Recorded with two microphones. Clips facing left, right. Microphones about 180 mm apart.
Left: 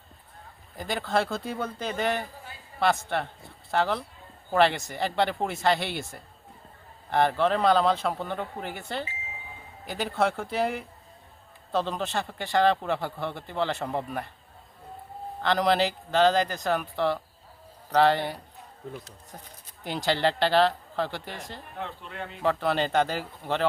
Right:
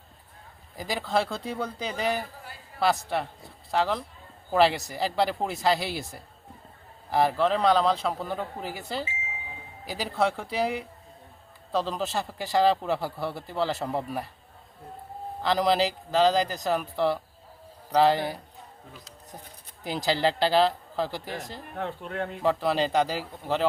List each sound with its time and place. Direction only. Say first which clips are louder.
0.8 s speech: even; centre (ahead or behind)
15.4 s speech: even; centre (ahead or behind)
19.8 s speech: even; 5° right (ahead or behind)
21.2 s speech: right 3 dB; 45° right (ahead or behind)
22.4 s speech: even; centre (ahead or behind)